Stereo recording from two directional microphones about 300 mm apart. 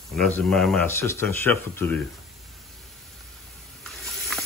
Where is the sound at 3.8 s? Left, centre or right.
Centre.